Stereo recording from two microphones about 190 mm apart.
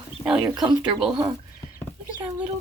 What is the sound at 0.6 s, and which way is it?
Speech, 20° right (ahead or behind).